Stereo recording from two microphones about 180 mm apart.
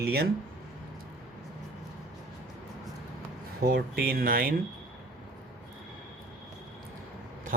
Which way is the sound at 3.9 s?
55° right (ahead or behind).